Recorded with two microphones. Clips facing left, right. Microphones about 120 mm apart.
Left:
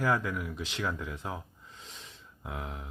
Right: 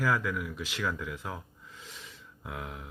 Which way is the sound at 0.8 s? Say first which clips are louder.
Right 1 dB; 30° left (ahead or behind).